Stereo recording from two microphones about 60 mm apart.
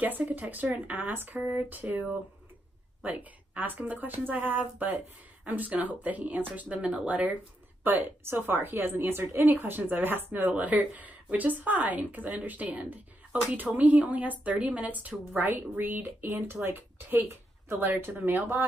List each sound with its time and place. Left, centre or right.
0.0 s speech: right
10.5 s speech: right
16.3 s speech: right
16.5 s speech: right
17.7 s speech: right